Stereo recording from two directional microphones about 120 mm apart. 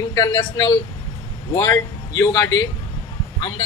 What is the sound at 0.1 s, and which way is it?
A man's voice, 35° left (ahead or behind).